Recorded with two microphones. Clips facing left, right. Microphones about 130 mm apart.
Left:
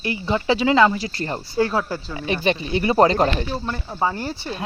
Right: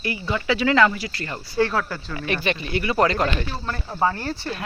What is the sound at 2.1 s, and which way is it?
Speech, 15° left (ahead or behind).